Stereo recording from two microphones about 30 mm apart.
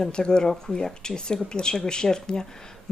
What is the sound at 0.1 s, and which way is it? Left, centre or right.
Speech, left.